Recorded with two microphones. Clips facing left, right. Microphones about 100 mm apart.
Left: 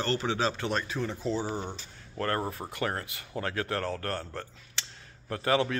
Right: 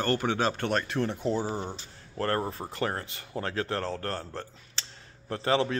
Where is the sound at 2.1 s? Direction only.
35° right (ahead or behind).